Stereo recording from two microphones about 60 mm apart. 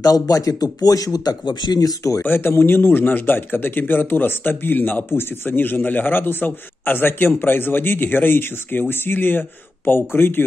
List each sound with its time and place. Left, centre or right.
0.0 s speech: left
2.2 s speech: left